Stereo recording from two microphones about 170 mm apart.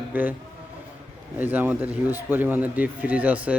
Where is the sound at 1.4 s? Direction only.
10° right (ahead or behind).